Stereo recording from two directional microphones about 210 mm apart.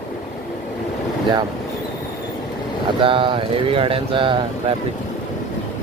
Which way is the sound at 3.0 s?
25° right (ahead or behind).